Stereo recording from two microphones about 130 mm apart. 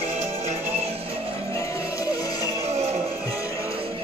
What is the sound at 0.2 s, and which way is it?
Music, 60° right (ahead or behind).